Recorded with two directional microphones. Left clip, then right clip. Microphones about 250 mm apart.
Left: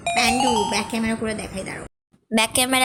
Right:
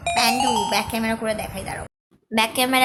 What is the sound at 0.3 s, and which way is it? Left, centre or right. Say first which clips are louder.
Speech: left 1 dB; centre.